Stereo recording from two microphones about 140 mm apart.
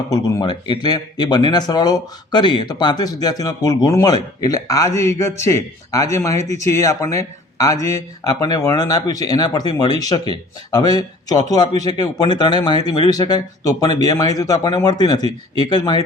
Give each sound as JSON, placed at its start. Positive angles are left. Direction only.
{"t": 0.1, "sound": "speech", "side_deg": 25}
{"t": 6.4, "sound": "speech", "side_deg": -55}
{"t": 6.7, "sound": "speech", "side_deg": 20}